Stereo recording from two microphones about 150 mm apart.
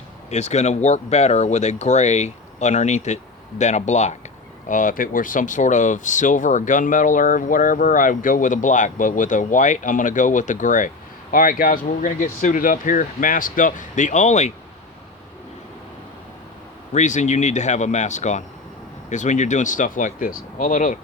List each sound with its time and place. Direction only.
0.3 s speech: 50° left (ahead or behind)
4.7 s speech: 65° left (ahead or behind)
16.9 s speech: 55° left (ahead or behind)